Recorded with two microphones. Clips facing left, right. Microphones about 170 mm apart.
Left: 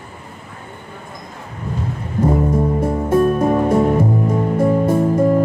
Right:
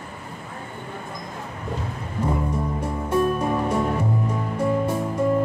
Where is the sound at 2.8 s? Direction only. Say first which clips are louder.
Left 5 dB; 50° left (ahead or behind).